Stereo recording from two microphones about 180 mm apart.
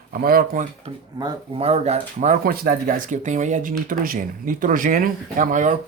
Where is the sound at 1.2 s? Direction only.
35° right (ahead or behind).